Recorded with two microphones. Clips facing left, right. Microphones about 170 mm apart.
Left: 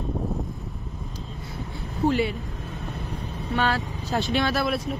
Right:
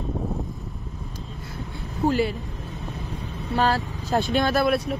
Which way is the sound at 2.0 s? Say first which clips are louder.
Right 1 dB; centre (ahead or behind).